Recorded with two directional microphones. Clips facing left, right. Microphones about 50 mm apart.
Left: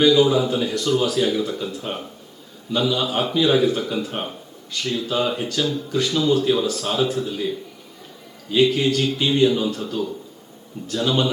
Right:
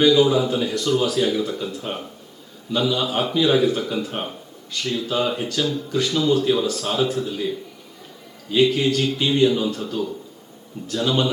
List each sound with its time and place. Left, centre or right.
0.0 s a man's voice: left